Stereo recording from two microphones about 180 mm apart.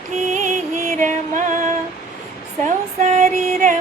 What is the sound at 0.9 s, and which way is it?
Music, 45° right (ahead or behind).